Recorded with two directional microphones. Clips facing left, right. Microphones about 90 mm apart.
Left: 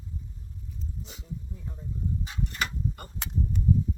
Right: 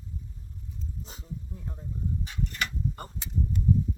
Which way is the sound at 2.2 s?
30° left (ahead or behind).